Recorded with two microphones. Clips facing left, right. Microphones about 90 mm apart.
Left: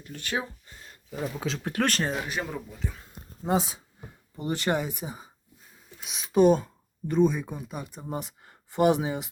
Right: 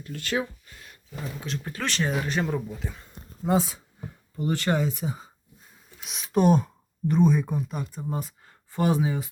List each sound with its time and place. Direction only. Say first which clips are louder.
0.0 s a sound: right 3 dB; 20° left (ahead or behind)
1.2 s speech: left 3 dB; 80° left
1.8 s speech: left 3 dB; 45° left (ahead or behind)
2.2 s speech: right 5 dB; 5° left (ahead or behind)
3.4 s speech: right 2 dB; 20° left (ahead or behind)
6.0 s speech: left 2 dB; centre (ahead or behind)
7.9 s speech: right 2 dB; 15° left (ahead or behind)